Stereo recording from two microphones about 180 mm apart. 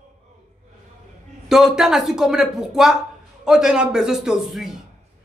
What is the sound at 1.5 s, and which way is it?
Speech, centre (ahead or behind).